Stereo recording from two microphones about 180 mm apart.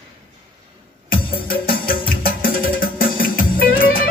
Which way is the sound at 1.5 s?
55° left (ahead or behind).